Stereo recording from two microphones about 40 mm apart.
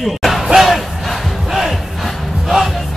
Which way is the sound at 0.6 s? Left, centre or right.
Centre.